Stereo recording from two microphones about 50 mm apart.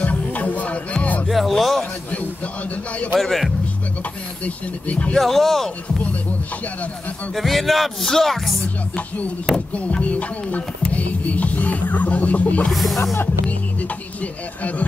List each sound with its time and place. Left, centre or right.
0.0 s music: left
1.2 s music: centre
1.5 s a sound: centre
3.2 s music: centre
4.5 s music: left
5.1 s music: centre
7.3 s music: centre
9.8 s music: left
12.7 s music: centre
13.5 s music: left